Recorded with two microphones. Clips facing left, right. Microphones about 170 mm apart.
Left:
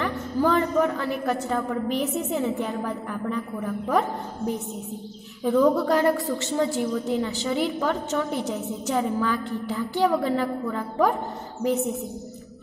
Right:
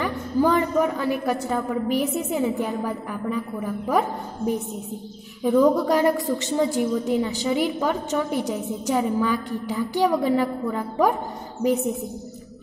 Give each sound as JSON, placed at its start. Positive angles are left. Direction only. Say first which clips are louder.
{"t": 0.0, "sound": "a woman's voice", "louder": "right 2 dB", "side_deg": -10}
{"t": 5.4, "sound": "a woman's voice", "louder": "right 2 dB", "side_deg": -10}